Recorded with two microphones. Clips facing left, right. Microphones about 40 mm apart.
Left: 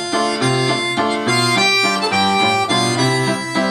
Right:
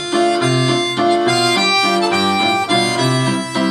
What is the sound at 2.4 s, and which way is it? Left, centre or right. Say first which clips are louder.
Accordion: right 1 dB; right.